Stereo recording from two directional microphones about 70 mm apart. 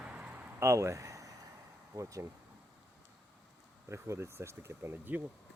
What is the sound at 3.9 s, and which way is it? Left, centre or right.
Speech, right.